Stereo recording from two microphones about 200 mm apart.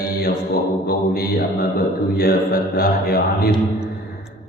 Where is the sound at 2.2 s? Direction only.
50° left (ahead or behind).